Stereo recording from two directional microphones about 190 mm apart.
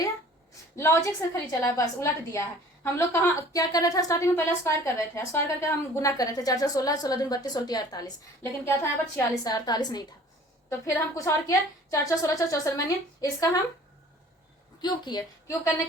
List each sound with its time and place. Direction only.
0.8 s a woman's voice: 15° left (ahead or behind)
14.8 s a woman's voice: 20° left (ahead or behind)